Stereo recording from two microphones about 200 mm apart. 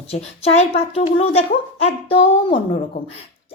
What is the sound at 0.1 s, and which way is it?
A woman's voice, 30° left (ahead or behind).